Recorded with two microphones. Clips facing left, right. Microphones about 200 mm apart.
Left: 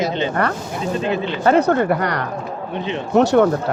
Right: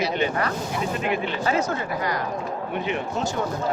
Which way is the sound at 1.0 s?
30° left (ahead or behind).